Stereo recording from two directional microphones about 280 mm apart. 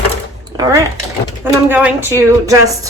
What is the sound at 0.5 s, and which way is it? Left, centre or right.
A woman's voice, centre.